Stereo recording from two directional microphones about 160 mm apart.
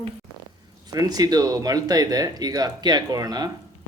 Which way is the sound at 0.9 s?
25° right (ahead or behind).